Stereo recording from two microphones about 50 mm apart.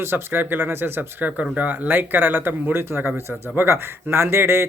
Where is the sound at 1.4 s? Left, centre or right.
Right.